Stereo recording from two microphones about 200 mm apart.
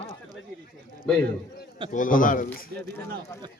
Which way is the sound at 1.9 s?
40° left (ahead or behind).